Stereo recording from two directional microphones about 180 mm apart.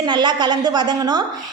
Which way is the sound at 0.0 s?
25° right (ahead or behind).